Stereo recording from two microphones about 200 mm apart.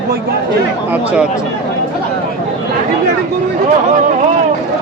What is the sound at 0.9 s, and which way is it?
Speech, 5° right (ahead or behind).